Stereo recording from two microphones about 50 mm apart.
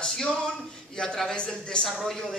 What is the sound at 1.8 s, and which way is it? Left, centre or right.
Speech, centre.